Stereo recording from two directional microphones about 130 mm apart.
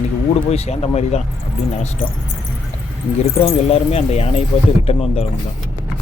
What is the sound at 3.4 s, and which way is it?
Speech, 50° left (ahead or behind).